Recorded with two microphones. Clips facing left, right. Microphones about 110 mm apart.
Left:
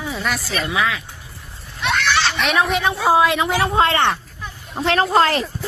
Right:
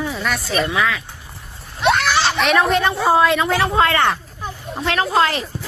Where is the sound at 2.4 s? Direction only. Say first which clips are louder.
Right 3 dB; centre (ahead or behind).